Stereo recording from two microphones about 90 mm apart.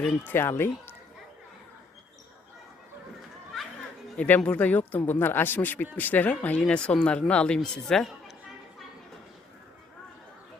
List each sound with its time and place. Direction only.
0.3 s speech: 25° left (ahead or behind)
3.5 s chatter: centre (ahead or behind)
4.2 s speech: 15° left (ahead or behind)